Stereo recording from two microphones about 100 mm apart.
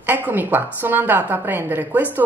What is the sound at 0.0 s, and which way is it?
A woman's voice, 20° right (ahead or behind).